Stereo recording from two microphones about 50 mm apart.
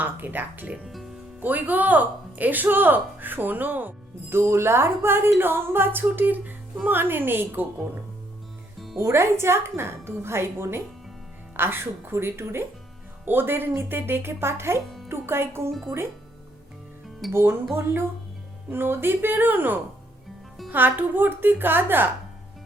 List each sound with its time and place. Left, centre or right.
0.0 s speech: right
0.9 s music: centre
1.4 s speech: right
4.3 s speech: right
9.0 s a woman's voice: right
17.3 s speech: right